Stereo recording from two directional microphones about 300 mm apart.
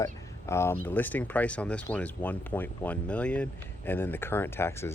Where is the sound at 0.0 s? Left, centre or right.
Centre.